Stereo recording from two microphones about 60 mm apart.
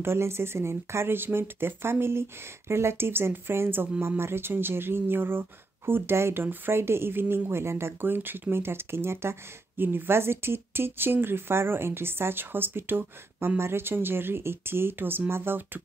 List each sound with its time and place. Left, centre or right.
0.0 s speech: right